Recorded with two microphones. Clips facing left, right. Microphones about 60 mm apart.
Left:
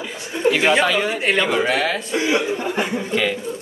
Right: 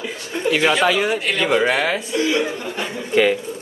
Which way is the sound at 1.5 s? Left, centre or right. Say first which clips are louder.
Right 2 dB; centre.